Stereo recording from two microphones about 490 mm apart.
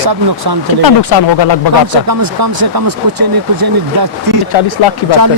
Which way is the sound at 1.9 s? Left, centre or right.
Right.